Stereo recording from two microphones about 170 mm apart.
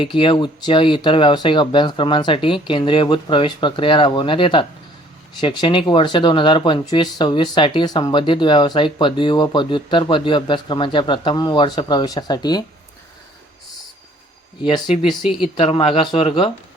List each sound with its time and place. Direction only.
0.0 s speech: 30° left (ahead or behind)
15.0 s speech: centre (ahead or behind)
15.5 s speech: 30° left (ahead or behind)